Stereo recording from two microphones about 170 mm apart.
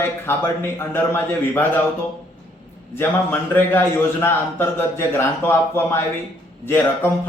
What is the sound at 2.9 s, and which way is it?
A man's voice, 10° left (ahead or behind).